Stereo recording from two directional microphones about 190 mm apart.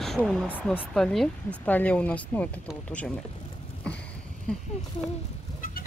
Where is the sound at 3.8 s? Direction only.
5° left (ahead or behind).